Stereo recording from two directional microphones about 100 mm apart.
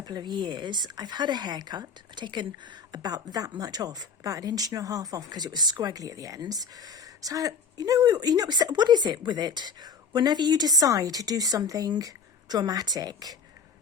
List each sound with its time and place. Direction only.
0.0 s speech: 45° right (ahead or behind)